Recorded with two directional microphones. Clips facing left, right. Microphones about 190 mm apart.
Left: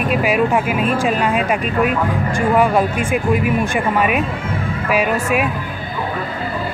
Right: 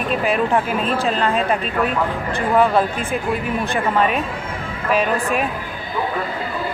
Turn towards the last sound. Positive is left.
turn(degrees=10)  # may be behind; listen again after turning